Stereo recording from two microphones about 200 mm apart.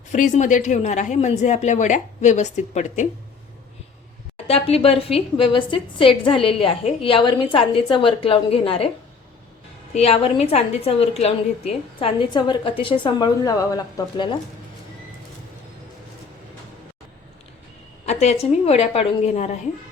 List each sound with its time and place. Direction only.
0.1 s a woman's voice: 40° left (ahead or behind)
4.4 s a woman's voice: 30° left (ahead or behind)
9.9 s a woman's voice: 30° left (ahead or behind)
18.0 s a woman's voice: 35° left (ahead or behind)